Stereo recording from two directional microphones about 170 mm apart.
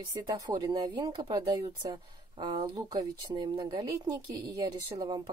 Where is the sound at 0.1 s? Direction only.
20° right (ahead or behind).